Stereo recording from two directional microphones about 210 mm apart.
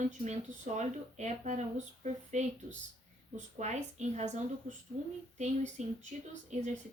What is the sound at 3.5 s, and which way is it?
A woman's voice, 35° right (ahead or behind).